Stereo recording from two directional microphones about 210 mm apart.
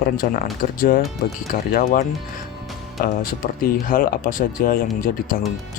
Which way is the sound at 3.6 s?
45° left (ahead or behind).